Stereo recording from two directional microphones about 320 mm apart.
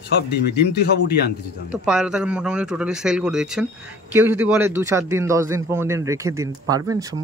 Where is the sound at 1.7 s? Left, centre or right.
Centre.